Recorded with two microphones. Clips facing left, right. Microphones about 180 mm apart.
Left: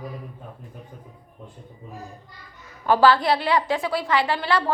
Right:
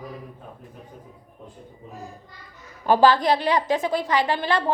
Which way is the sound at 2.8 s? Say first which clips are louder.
Even; 20° right (ahead or behind).